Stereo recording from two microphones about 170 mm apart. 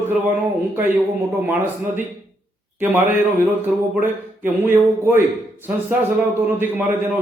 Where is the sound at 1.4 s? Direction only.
10° right (ahead or behind).